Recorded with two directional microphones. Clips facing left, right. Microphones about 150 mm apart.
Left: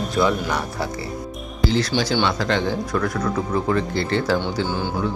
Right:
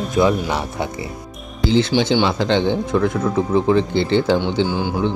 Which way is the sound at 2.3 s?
30° right (ahead or behind).